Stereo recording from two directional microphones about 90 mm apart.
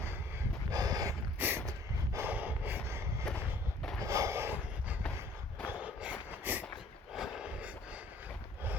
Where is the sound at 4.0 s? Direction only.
35° right (ahead or behind).